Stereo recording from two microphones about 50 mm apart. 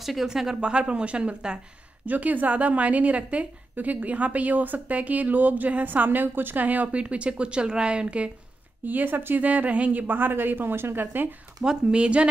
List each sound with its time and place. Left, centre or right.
0.0 s a woman's voice: centre
0.6 s speech: right
2.0 s a woman's voice: right
7.0 s speech: right
8.8 s a woman's voice: right
11.6 s speech: centre